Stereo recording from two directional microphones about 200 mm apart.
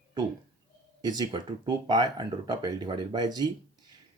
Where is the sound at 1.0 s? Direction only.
20° right (ahead or behind).